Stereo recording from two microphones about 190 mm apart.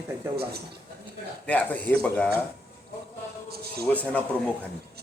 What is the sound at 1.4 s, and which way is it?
Speech, 10° left (ahead or behind).